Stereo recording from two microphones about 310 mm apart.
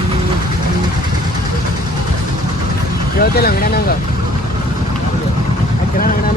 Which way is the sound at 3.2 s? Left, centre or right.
Left.